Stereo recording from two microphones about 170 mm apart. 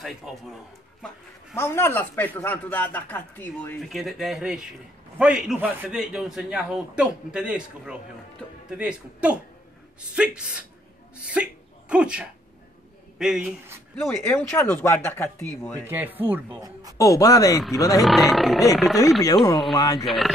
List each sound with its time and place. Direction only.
0.0 s a man's voice: centre (ahead or behind)
1.5 s speech: 15° left (ahead or behind)
3.8 s a man's voice: centre (ahead or behind)
14.0 s speech: 15° left (ahead or behind)
15.9 s speech: 10° right (ahead or behind)
17.0 s speech: 20° left (ahead or behind)
18.0 s a man's voice: centre (ahead or behind)
19.2 s speech: 20° left (ahead or behind)